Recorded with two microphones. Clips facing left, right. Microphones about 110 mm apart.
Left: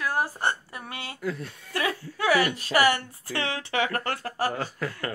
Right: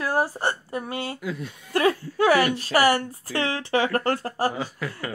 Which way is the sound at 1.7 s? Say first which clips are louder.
Right 8 dB; 40° right (ahead or behind).